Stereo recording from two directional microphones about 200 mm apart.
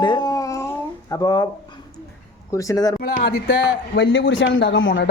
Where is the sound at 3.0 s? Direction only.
55° left (ahead or behind).